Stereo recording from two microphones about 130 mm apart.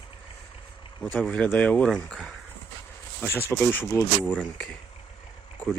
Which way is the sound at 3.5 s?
20° left (ahead or behind).